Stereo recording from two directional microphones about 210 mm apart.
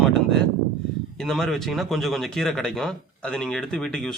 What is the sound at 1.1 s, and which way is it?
Speech, centre (ahead or behind).